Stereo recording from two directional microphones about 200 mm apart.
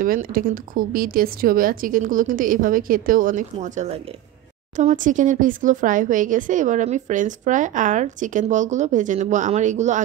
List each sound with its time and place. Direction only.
0.0 s speech: 45° right (ahead or behind)